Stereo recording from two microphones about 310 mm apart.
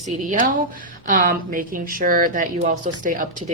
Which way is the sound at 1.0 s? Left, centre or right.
Right.